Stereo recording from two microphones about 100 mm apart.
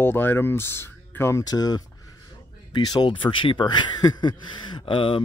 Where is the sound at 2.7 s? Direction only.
55° left (ahead or behind).